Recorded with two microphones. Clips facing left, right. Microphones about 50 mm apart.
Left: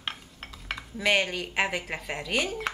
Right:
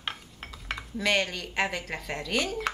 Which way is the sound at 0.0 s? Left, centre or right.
Centre.